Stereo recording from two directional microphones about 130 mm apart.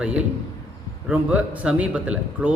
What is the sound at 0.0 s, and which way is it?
A man's voice, 10° right (ahead or behind).